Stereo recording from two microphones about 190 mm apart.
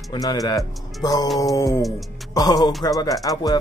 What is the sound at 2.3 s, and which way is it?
Speech, 20° left (ahead or behind).